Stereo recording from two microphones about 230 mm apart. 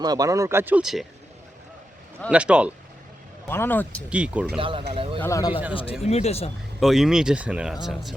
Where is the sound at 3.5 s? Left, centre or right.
Centre.